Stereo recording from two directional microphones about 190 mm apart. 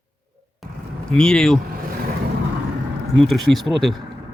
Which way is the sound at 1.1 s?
5° left (ahead or behind).